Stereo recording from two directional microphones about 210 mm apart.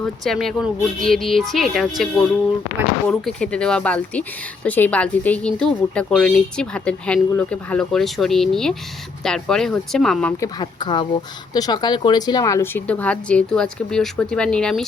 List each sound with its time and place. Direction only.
0.0 s speech: centre (ahead or behind)
3.1 s speech: 5° left (ahead or behind)
10.4 s speech: 20° left (ahead or behind); by 14.8 s 5° left (ahead or behind)